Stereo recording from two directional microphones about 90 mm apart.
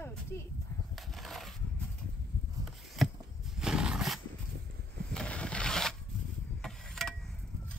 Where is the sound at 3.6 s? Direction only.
10° right (ahead or behind).